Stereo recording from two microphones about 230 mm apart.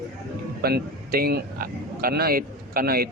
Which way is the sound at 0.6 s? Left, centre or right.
Right.